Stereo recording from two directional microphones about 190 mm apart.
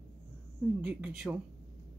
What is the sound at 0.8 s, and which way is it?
Speech, 5° right (ahead or behind).